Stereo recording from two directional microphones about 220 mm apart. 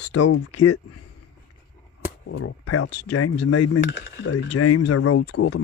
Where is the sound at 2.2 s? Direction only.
80° left.